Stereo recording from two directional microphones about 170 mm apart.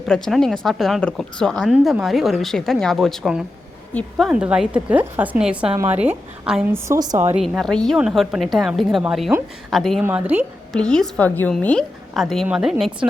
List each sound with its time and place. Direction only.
0.1 s a woman's voice: centre (ahead or behind)
6.7 s a woman's voice: 15° right (ahead or behind)
7.3 s a woman's voice: centre (ahead or behind)
10.0 s a woman's voice: 10° right (ahead or behind)
10.7 s a woman's voice: 5° left (ahead or behind)